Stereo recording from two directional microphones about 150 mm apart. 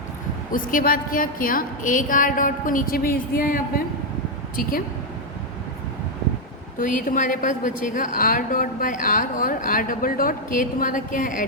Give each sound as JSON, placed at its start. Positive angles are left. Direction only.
{"t": 0.5, "sound": "a woman's voice", "side_deg": 65}
{"t": 6.7, "sound": "a woman's voice", "side_deg": 65}